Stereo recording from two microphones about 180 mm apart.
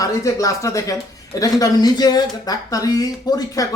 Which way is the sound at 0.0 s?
20° left (ahead or behind).